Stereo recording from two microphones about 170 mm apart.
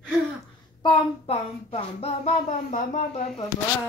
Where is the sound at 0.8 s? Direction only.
35° left (ahead or behind).